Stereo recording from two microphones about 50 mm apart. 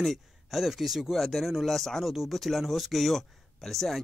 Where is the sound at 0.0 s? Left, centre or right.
Centre.